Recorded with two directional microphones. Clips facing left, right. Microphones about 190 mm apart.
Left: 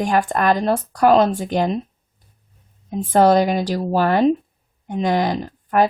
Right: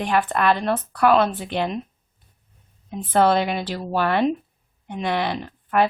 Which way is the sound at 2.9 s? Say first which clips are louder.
Left 4 dB; 40° left (ahead or behind).